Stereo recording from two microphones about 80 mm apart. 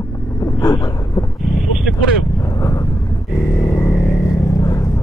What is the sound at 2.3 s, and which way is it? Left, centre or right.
Vehicle, left.